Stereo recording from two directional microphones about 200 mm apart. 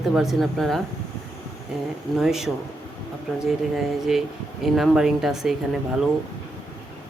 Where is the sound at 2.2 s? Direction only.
Centre (ahead or behind).